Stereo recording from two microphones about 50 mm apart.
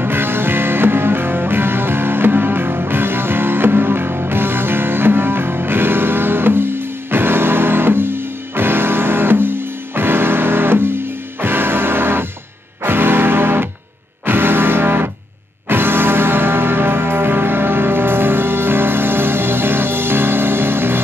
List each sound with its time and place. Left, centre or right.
0.0 s music: right